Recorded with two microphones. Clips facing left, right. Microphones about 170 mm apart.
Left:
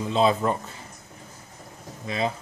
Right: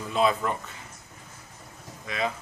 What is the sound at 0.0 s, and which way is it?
Speech, 25° left (ahead or behind).